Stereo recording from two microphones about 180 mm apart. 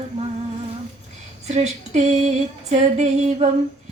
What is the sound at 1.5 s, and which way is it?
Female singing, 40° right (ahead or behind).